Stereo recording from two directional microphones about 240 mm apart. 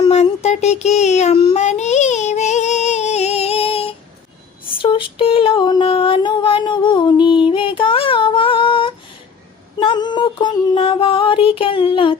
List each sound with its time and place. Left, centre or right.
0.1 s child singing: left
4.8 s female singing: left
9.8 s a sound: centre